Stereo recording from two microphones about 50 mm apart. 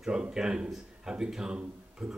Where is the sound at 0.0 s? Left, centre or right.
Centre.